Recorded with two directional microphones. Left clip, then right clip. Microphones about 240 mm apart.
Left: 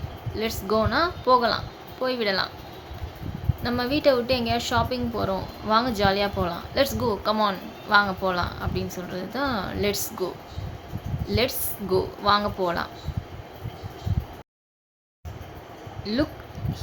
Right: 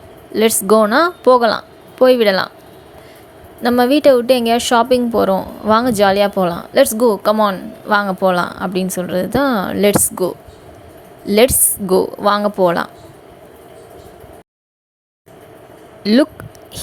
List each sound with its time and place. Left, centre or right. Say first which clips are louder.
0.3 s a woman's voice: right 13 dB; right
3.6 s a woman's voice: right 12 dB; right
16.0 s a woman's voice: right 13 dB; right